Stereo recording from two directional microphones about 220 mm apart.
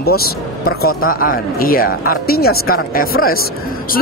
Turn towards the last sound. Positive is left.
turn(degrees=40)  # may be behind; listen again after turning